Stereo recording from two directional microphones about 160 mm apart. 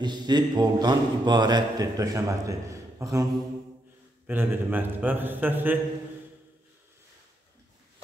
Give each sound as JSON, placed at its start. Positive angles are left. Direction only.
{"t": 0.0, "sound": "a man's voice", "side_deg": -25}
{"t": 4.3, "sound": "a man's voice", "side_deg": -10}